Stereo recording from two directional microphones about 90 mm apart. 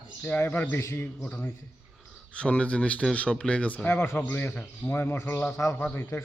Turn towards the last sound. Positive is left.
turn(degrees=25)  # may be behind; listen again after turning